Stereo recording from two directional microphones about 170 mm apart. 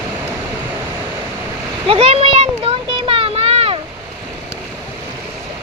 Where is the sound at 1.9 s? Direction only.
35° right (ahead or behind).